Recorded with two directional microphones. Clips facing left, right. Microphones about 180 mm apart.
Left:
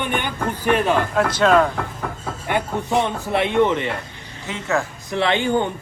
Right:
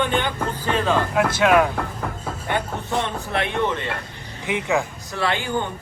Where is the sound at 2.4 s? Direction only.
15° left (ahead or behind).